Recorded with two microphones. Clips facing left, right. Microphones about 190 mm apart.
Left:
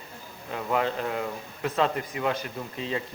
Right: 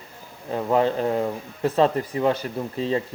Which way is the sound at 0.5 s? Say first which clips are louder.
Right 6 dB; 35° right (ahead or behind).